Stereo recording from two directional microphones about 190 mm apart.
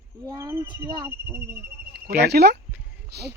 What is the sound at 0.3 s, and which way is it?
Speech, 15° right (ahead or behind).